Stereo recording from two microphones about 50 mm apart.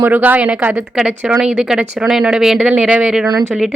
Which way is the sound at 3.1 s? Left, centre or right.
Centre.